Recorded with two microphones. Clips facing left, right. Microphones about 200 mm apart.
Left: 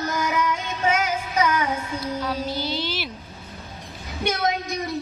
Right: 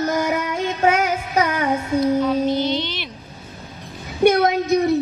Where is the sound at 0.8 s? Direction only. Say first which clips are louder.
Right 4 dB; 60° right (ahead or behind).